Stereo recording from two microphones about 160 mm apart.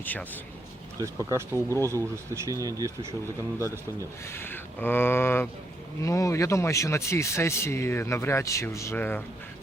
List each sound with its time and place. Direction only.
0.0 s speech: 10° left (ahead or behind)
0.9 s speech: 20° right (ahead or behind)
4.3 s speech: 15° left (ahead or behind)